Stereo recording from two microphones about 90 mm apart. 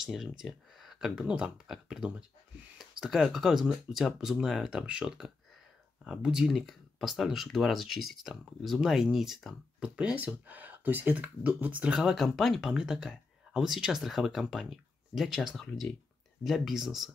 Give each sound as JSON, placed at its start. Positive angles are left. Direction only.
{"t": 0.0, "sound": "speech", "side_deg": -5}
{"t": 9.8, "sound": "speech", "side_deg": -10}